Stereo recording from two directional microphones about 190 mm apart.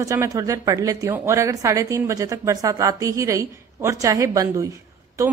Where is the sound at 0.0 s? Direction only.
15° right (ahead or behind).